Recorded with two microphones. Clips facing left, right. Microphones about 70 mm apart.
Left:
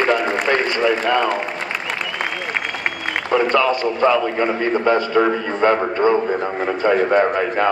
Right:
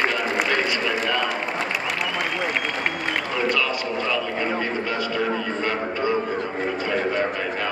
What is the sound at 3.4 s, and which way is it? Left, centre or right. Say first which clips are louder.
A man's voice: left 6 dB; left.